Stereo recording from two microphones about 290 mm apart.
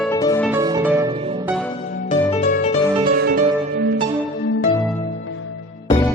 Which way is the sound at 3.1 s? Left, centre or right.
Right.